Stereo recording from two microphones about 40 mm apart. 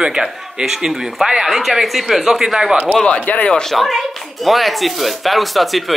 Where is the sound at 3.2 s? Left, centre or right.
Left.